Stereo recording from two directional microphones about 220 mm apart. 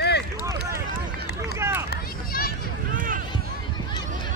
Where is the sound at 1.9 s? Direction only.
40° left (ahead or behind).